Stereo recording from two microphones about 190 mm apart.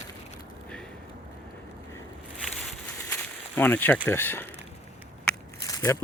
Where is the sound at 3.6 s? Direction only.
10° left (ahead or behind).